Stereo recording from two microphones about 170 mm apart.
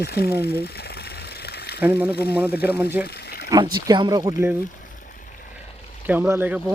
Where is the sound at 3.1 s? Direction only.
70° left (ahead or behind).